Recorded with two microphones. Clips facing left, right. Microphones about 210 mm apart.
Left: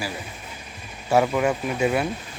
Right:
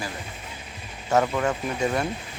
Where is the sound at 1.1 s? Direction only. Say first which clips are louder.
Left 3 dB; 10° left (ahead or behind).